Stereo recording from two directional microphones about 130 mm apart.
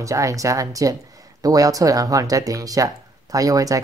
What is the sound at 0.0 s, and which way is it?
Speech, 25° right (ahead or behind).